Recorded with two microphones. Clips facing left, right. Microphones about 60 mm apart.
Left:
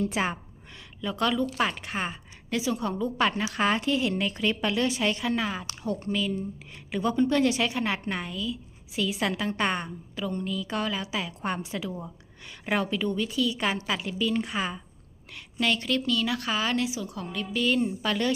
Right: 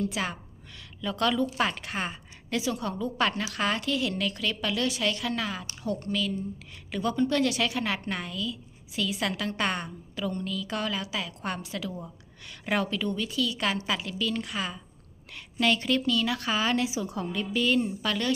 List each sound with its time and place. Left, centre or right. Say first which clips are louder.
0.0 s a woman's voice: left 3 dB; left
1.0 s a woman's voice: even; centre
15.5 s speech: right 1 dB; centre
17.0 s speech: right 2 dB; centre